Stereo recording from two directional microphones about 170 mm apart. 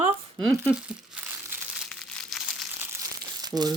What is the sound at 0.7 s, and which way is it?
Crumpling, 10° right (ahead or behind).